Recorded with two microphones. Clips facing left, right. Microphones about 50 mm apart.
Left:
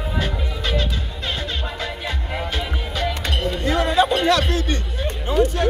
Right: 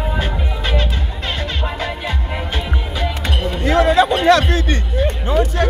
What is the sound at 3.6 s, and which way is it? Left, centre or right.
Music, right.